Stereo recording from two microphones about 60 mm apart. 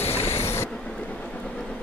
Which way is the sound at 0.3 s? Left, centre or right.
Left.